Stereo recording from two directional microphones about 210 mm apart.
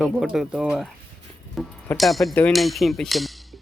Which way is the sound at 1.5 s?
Centre (ahead or behind).